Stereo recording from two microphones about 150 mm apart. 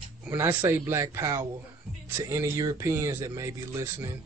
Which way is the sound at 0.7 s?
20° right (ahead or behind).